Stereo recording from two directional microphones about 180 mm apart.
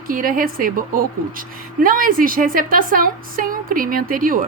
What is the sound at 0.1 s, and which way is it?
A woman's voice, 50° right (ahead or behind).